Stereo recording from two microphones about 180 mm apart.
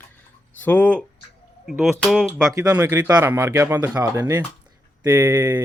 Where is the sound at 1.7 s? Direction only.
Centre (ahead or behind).